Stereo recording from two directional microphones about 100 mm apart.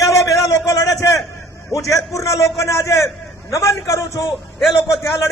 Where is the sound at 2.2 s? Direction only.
30° left (ahead or behind).